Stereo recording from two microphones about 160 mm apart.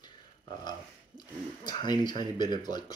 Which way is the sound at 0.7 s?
25° left (ahead or behind).